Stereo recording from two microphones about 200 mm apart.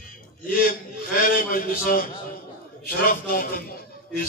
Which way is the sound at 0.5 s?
45° left (ahead or behind).